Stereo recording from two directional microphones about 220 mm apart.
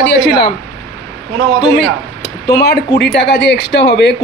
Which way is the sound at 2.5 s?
50° left (ahead or behind).